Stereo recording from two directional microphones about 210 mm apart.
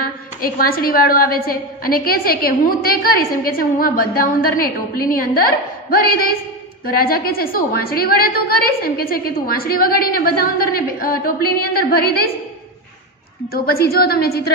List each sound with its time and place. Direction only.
0.0 s a woman's voice: 45° left (ahead or behind)
13.5 s a woman's voice: 45° left (ahead or behind)